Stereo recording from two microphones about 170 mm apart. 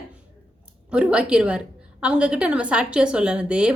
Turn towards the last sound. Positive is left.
turn(degrees=-5)  # may be behind; listen again after turning